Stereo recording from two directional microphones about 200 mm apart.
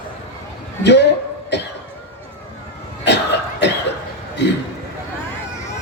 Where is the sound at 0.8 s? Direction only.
60° left (ahead or behind).